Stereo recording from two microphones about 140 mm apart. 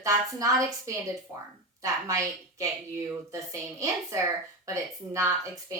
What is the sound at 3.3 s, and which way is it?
A woman's voice, 25° right (ahead or behind).